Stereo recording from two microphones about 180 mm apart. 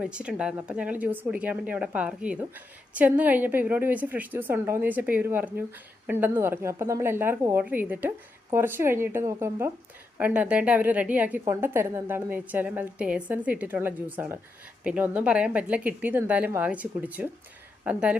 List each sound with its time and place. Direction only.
0.0 s speech: 5° right (ahead or behind)